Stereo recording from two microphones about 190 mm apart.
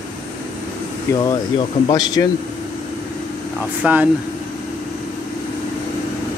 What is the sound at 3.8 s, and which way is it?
Speech, 10° right (ahead or behind).